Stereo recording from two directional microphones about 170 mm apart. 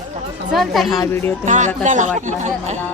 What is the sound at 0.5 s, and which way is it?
Speech, centre (ahead or behind).